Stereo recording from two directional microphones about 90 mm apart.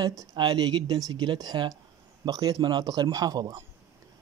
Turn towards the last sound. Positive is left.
turn(degrees=-45)  # may be behind; listen again after turning